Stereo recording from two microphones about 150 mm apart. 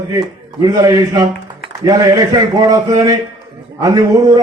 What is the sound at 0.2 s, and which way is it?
A man's voice, 25° right (ahead or behind).